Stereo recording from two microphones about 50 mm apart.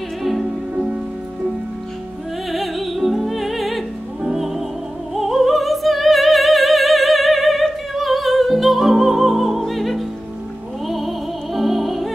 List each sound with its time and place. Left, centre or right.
0.2 s music: centre
0.7 s music: centre
2.5 s music: centre
5.1 s opera: centre
10.9 s music: centre